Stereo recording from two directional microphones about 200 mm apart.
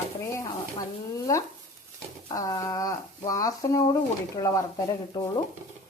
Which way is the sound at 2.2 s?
20° left (ahead or behind).